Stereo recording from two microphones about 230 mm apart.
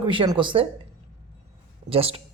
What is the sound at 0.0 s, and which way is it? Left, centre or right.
Speech, right.